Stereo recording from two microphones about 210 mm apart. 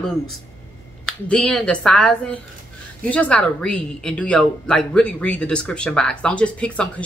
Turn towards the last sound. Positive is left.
turn(degrees=5)  # may be behind; listen again after turning